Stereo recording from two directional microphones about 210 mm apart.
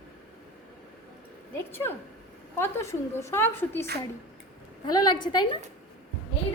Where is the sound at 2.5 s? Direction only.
10° left (ahead or behind).